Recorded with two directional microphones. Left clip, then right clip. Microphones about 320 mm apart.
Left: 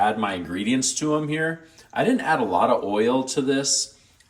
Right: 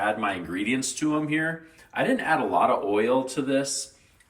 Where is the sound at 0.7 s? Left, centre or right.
Centre.